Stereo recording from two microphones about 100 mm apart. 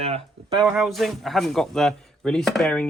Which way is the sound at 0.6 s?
Centre (ahead or behind).